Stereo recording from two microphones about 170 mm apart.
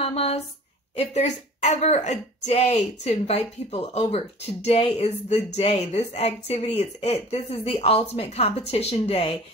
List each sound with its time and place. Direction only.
0.0 s a woman's voice: 35° left (ahead or behind)